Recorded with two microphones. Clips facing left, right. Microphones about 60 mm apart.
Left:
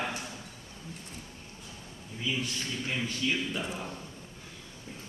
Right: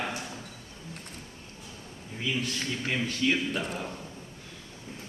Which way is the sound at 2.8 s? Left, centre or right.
Right.